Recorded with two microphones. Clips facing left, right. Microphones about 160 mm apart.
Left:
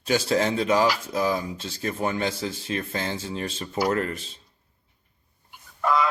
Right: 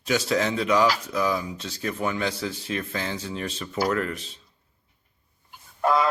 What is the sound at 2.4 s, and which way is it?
Speech, 30° left (ahead or behind).